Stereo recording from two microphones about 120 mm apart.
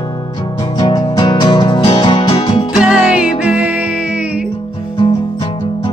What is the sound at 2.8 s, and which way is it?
Music, 10° right (ahead or behind).